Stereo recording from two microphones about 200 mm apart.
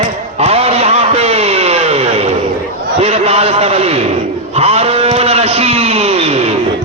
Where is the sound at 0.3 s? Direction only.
30° right (ahead or behind).